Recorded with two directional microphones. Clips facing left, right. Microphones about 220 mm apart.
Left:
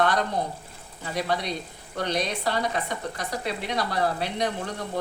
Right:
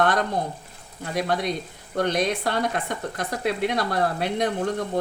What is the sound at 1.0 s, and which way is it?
Speech, 50° right (ahead or behind).